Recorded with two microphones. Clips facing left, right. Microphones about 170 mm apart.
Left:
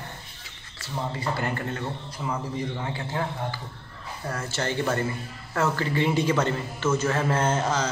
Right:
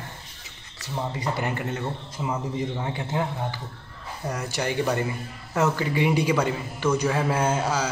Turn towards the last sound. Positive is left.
turn(degrees=-10)  # may be behind; listen again after turning